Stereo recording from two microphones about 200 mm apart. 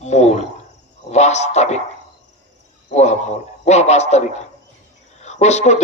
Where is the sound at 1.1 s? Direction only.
35° left (ahead or behind).